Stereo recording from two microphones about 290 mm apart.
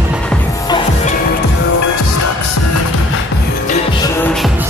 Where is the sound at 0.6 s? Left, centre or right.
Centre.